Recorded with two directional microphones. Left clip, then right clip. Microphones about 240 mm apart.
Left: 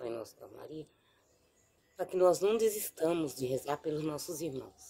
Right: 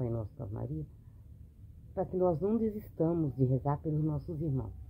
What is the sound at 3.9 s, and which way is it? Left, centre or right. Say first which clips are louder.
Speech: left 1 dB; left.